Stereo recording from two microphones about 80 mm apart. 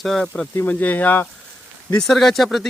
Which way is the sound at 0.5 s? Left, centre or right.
Left.